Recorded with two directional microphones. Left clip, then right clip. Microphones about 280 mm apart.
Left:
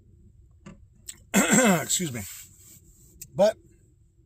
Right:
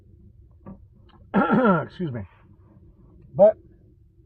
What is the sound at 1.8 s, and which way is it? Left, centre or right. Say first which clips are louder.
Speech: left 1 dB; left.